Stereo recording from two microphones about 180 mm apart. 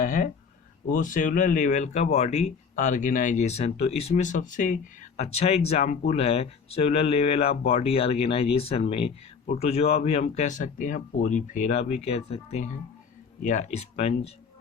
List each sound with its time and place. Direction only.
0.0 s speech: 50° left (ahead or behind)